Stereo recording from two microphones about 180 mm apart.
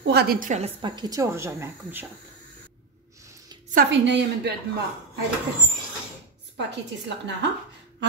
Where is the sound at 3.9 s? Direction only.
75° right (ahead or behind).